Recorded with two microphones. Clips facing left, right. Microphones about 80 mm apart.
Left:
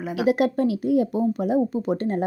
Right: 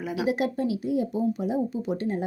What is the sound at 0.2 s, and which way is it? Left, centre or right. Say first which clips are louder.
A woman's voice: left 6 dB; left.